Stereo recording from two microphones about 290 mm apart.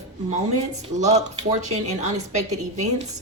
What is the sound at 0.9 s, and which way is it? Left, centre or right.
A woman's voice, right.